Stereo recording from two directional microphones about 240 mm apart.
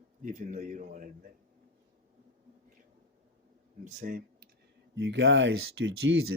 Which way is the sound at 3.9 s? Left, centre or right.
Right.